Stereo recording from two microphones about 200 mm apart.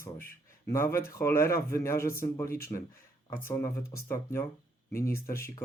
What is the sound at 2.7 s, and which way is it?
Speech, 25° left (ahead or behind).